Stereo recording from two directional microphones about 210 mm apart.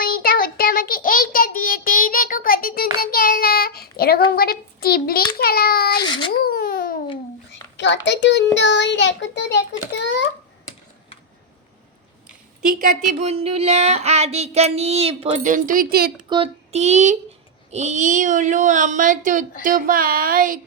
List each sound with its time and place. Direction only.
0.0 s child singing: 45° left (ahead or behind)
6.0 s a sound: 20° left (ahead or behind)
6.3 s a sound: 45° left (ahead or behind)
7.8 s child singing: 60° left (ahead or behind)
13.1 s child singing: 30° right (ahead or behind); by 16.1 s 45° right (ahead or behind)
16.3 s child singing: 30° right (ahead or behind)